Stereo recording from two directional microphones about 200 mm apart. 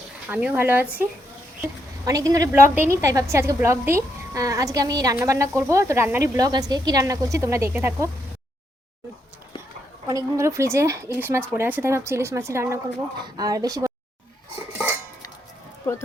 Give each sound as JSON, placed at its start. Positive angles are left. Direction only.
{"t": 0.3, "sound": "a woman's voice", "side_deg": -5}
{"t": 2.0, "sound": "a woman's voice", "side_deg": -15}
{"t": 10.1, "sound": "a woman's voice", "side_deg": -15}